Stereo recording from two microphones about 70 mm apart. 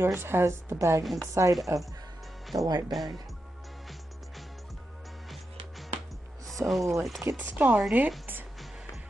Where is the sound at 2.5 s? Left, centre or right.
Right.